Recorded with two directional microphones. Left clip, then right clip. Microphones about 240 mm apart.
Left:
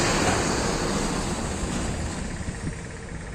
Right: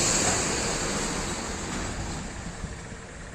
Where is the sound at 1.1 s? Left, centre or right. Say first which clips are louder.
Left 2 dB; left.